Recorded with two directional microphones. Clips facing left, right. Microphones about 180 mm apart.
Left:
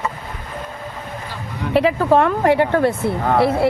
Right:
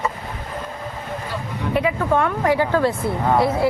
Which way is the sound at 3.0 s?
65° left (ahead or behind).